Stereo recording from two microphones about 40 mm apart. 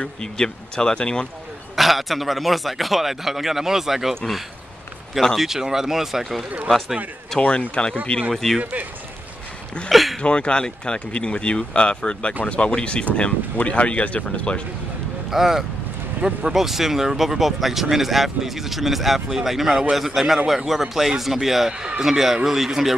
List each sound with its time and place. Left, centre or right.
0.0 s speech: left
1.8 s a man's voice: centre
5.3 s speech: centre
7.3 s speech: left
8.3 s speech: centre
9.8 s a man's voice: centre
10.2 s speech: left
15.3 s speech: centre
16.2 s speech: right
16.5 s a man's voice: centre